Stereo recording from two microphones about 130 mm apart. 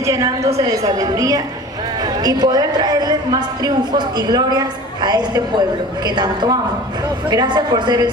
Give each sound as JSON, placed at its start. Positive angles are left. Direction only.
{"t": 0.0, "sound": "a woman's voice", "side_deg": -25}